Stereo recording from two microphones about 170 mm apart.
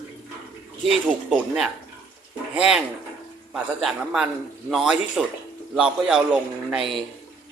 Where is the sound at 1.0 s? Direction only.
Centre (ahead or behind).